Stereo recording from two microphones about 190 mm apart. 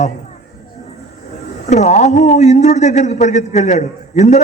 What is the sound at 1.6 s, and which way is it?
Speech, 35° left (ahead or behind).